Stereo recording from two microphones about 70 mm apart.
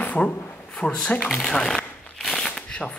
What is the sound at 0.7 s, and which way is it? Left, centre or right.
Speech, centre.